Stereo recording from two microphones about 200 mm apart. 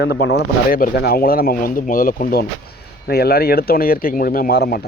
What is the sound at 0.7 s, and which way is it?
Speech, 50° left (ahead or behind).